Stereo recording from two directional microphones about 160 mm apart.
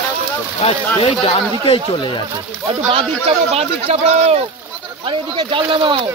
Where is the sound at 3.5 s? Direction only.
40° right (ahead or behind).